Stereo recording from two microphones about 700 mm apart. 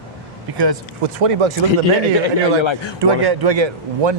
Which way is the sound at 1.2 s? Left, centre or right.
Right.